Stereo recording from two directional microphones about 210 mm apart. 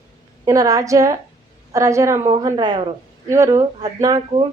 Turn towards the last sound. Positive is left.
turn(degrees=-20)  # may be behind; listen again after turning